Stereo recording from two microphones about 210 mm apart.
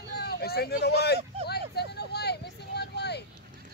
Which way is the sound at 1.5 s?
50° left (ahead or behind).